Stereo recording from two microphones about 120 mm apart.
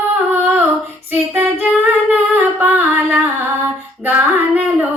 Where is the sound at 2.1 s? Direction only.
15° right (ahead or behind).